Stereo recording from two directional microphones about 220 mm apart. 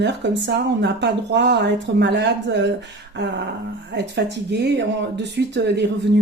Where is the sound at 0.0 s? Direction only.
50° right (ahead or behind).